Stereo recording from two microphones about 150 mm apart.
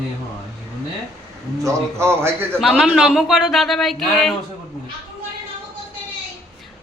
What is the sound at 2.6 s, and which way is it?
Speech, centre (ahead or behind).